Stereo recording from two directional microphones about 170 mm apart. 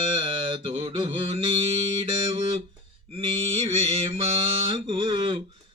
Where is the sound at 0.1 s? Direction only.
30° right (ahead or behind).